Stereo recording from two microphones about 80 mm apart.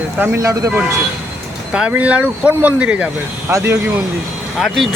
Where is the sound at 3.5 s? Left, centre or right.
Right.